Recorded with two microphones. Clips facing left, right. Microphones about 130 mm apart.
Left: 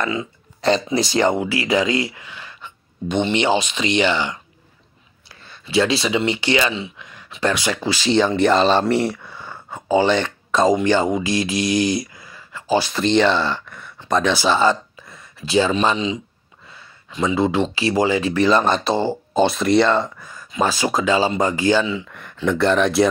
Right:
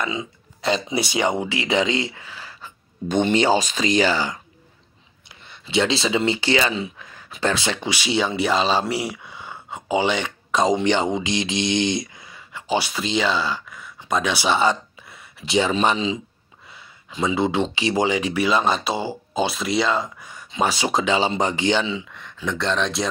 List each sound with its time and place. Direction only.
0.0 s speech: 15° right (ahead or behind)
0.6 s speech: centre (ahead or behind)
0.8 s speech: 15° right (ahead or behind)
1.4 s speech: 25° right (ahead or behind)
5.4 s speech: 20° right (ahead or behind)
13.0 s speech: 5° right (ahead or behind)
13.9 s a sound: 10° right (ahead or behind)
15.5 s speech: 20° right (ahead or behind)
17.4 s speech: 25° right (ahead or behind); by 20.1 s 5° right (ahead or behind)
20.2 s speech: 20° right (ahead or behind)
22.1 s speech: 5° left (ahead or behind)